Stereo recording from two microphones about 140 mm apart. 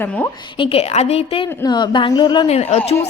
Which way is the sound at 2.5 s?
50° left (ahead or behind).